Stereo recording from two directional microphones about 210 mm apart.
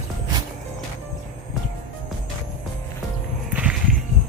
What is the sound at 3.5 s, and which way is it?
Walk, 5° right (ahead or behind).